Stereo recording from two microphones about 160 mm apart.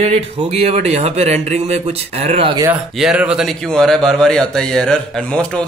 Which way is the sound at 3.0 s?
5° right (ahead or behind).